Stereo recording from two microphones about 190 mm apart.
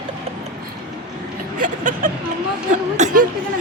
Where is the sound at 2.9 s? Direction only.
45° right (ahead or behind).